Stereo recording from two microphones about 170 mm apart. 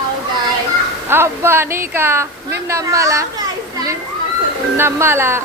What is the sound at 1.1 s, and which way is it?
A woman's voice, 15° right (ahead or behind).